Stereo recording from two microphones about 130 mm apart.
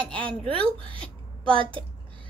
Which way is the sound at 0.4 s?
45° right (ahead or behind).